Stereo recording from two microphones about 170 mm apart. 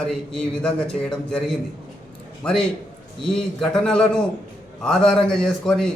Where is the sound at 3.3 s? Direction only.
5° left (ahead or behind).